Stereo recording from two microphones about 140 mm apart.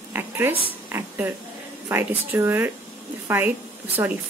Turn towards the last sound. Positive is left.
turn(degrees=-15)  # may be behind; listen again after turning